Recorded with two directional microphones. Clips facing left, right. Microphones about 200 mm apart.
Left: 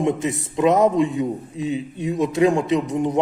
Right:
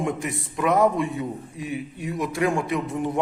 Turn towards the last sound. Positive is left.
turn(degrees=20)  # may be behind; listen again after turning